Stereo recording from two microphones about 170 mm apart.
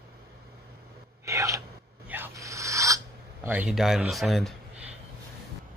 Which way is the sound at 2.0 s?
10° right (ahead or behind).